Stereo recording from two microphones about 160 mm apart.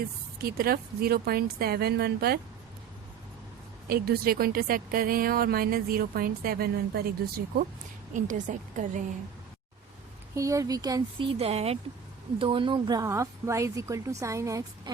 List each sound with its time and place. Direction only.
0.4 s speech: 70° right (ahead or behind)
3.8 s speech: 75° right (ahead or behind)
8.1 s a woman's voice: 50° right (ahead or behind)
10.3 s speech: 20° right (ahead or behind)